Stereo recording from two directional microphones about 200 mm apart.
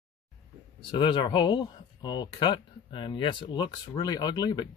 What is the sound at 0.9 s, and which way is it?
Speech, 25° left (ahead or behind).